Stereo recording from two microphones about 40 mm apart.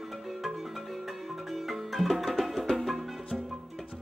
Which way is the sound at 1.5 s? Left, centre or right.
Centre.